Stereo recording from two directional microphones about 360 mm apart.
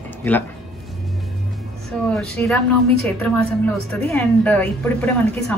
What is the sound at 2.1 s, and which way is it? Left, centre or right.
Speech, centre.